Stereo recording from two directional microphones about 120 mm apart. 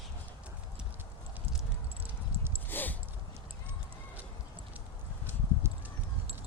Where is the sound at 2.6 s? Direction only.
15° left (ahead or behind).